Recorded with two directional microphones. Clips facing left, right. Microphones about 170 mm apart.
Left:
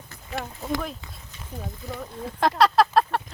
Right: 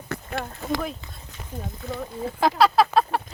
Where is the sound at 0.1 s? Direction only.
70° right (ahead or behind).